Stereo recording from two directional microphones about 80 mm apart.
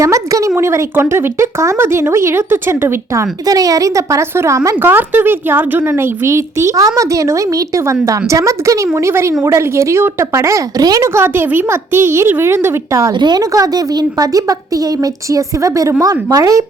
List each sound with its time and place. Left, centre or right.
0.0 s speech: right
4.8 s speech: right
11.0 s speech: right
13.1 s a woman's voice: right